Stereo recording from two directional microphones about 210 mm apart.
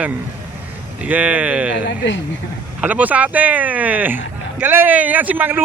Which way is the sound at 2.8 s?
5° right (ahead or behind).